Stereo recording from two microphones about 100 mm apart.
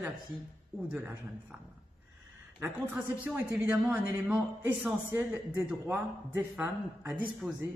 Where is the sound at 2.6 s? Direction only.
20° right (ahead or behind).